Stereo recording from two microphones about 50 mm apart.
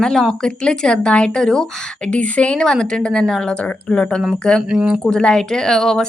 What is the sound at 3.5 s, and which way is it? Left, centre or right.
Speech, left.